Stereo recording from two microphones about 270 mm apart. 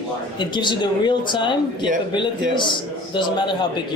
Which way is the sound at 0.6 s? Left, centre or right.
Centre.